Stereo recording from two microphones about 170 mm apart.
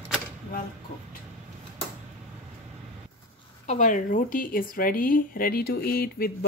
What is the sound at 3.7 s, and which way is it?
Speech, 50° left (ahead or behind).